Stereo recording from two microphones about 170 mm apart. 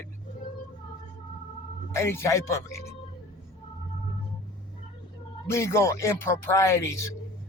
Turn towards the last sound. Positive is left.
turn(degrees=15)  # may be behind; listen again after turning